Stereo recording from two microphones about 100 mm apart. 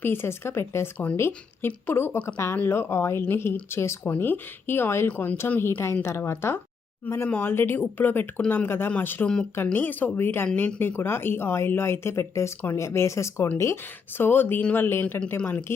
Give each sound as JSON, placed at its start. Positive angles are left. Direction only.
{"t": 0.0, "sound": "speech", "side_deg": 20}